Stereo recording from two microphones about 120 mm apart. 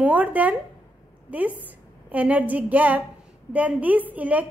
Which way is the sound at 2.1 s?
15° right (ahead or behind).